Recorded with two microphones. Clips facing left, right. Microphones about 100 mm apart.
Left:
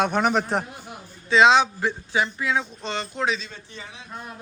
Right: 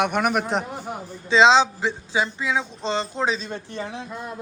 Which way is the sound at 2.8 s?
30° right (ahead or behind).